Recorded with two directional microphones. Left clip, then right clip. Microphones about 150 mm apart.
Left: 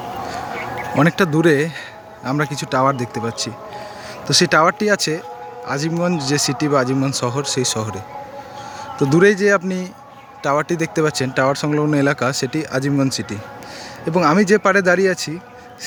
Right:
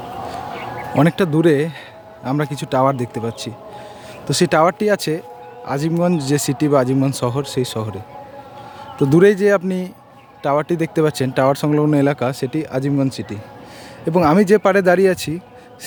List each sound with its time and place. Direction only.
0.3 s a sound: 90° left
0.9 s speech: 20° right (ahead or behind)
9.0 s speech: 30° right (ahead or behind); by 13.4 s 10° right (ahead or behind)
14.0 s speech: 30° right (ahead or behind)